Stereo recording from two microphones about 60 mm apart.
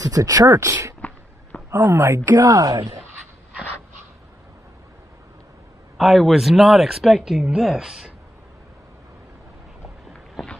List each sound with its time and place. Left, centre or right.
0.0 s speech: right
0.5 s speech: right
1.7 s speech: right
2.3 s speech: right
5.9 s speech: centre